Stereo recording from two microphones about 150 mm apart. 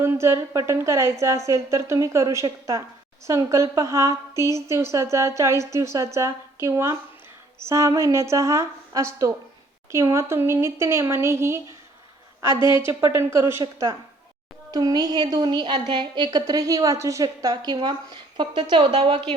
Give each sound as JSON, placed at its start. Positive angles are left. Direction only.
{"t": 0.0, "sound": "a woman's voice", "side_deg": -20}